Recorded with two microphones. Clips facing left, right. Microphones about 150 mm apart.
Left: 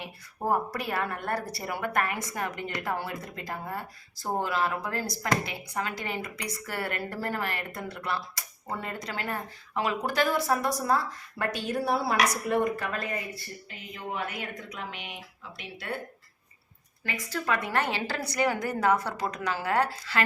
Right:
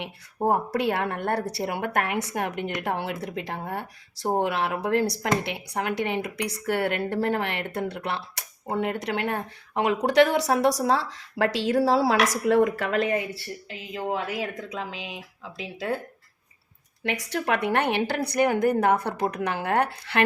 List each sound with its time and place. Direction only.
0.4 s a woman's voice: 70° right (ahead or behind); by 14.5 s 90° right
17.0 s a woman's voice: 70° right (ahead or behind)